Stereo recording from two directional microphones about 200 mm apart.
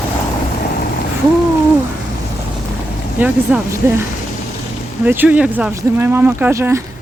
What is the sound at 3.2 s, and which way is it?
Speech, 10° right (ahead or behind).